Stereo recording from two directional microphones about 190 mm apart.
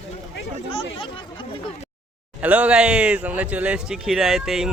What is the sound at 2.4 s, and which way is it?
Speech, 5° right (ahead or behind).